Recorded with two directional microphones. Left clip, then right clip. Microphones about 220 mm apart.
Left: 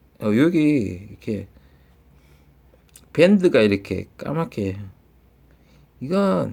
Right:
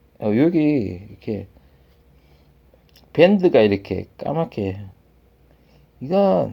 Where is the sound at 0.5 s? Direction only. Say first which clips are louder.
Even; 50° left (ahead or behind).